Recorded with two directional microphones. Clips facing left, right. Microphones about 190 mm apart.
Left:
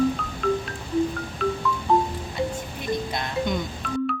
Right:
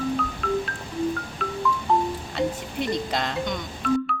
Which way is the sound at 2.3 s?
75° right (ahead or behind).